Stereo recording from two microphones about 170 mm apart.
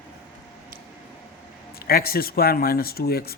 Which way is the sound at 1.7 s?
65° left (ahead or behind).